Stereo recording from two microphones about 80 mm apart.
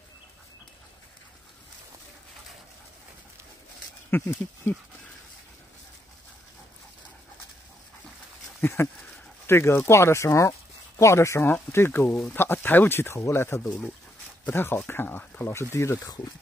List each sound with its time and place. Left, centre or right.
4.2 s speech: left
8.5 s speech: left